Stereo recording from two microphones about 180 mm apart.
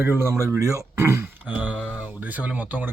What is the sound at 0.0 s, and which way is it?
Speech, 10° right (ahead or behind).